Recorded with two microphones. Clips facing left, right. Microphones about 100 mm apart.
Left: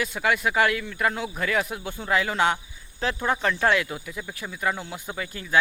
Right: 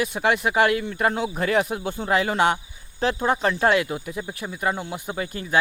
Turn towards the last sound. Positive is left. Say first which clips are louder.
# right 5 dB
turn(degrees=-40)  # may be behind; listen again after turning